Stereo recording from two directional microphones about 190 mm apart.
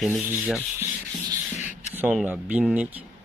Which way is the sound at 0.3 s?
10° right (ahead or behind).